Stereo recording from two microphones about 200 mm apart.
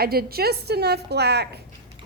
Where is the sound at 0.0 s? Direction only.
50° right (ahead or behind).